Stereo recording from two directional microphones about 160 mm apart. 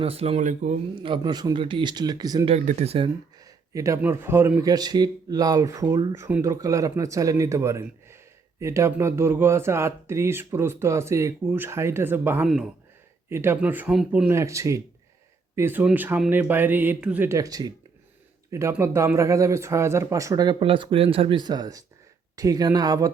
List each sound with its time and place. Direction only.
0.0 s speech: 40° right (ahead or behind)
1.0 s speech: 30° right (ahead or behind)
2.5 s speech: 40° right (ahead or behind)
3.4 s speech: 20° right (ahead or behind)
12.5 s speech: centre (ahead or behind)
13.3 s speech: 15° right (ahead or behind)